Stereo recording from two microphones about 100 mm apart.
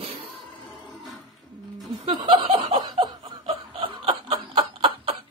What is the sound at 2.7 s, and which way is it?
Laughter, 45° right (ahead or behind).